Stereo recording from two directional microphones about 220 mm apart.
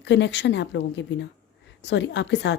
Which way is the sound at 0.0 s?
50° left (ahead or behind).